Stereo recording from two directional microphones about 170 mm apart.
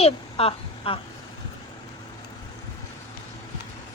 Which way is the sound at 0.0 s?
35° left (ahead or behind).